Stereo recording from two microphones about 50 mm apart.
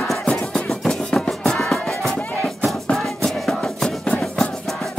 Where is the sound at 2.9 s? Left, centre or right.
Centre.